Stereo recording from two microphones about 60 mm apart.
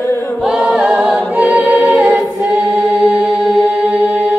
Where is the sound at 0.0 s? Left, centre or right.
Left.